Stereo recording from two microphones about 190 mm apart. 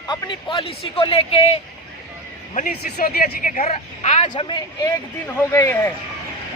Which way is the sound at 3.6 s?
35° left (ahead or behind).